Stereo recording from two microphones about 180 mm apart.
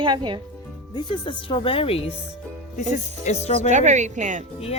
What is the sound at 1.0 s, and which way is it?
Speech, 25° left (ahead or behind).